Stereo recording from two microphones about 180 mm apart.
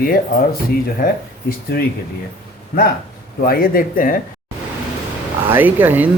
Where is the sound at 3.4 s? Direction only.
55° left (ahead or behind).